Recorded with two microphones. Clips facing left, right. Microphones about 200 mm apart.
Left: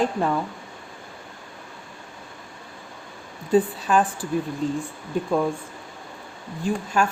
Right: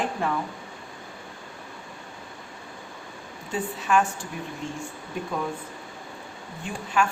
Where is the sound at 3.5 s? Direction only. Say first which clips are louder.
Left 5 dB; 35° left (ahead or behind).